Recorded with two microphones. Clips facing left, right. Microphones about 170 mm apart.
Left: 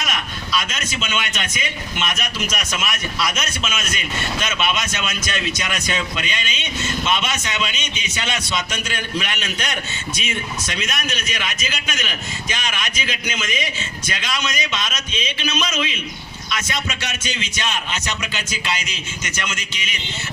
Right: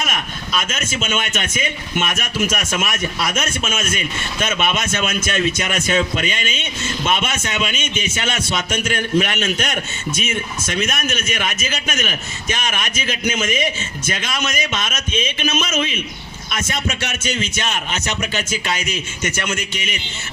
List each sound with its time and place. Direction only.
0.0 s a man's voice: 50° right (ahead or behind)